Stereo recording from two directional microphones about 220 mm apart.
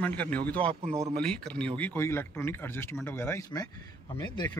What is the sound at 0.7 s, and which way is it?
Speech, 25° right (ahead or behind).